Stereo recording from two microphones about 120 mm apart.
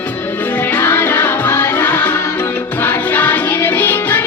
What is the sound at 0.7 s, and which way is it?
Music, 20° left (ahead or behind).